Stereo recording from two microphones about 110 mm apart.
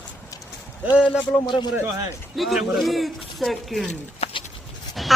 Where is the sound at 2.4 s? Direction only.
Centre (ahead or behind).